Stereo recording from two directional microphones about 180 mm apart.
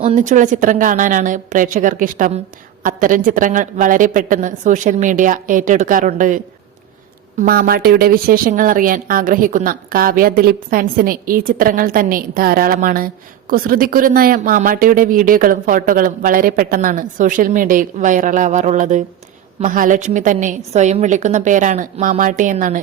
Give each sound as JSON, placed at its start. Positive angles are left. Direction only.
{"t": 0.0, "sound": "a woman's voice", "side_deg": -40}